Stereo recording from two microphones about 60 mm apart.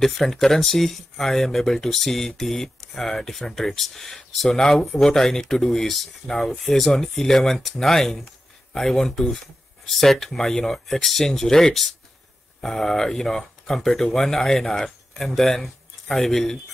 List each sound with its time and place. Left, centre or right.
0.0 s speech: centre